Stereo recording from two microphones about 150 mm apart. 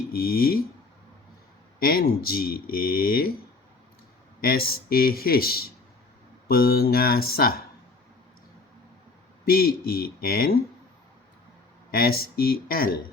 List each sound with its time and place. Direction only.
0.1 s speech: 80° left
1.8 s speech: 80° left
4.4 s speech: 85° left
9.5 s speech: 85° left
11.9 s speech: 85° left